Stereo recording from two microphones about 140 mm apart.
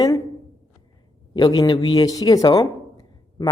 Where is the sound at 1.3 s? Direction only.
30° left (ahead or behind).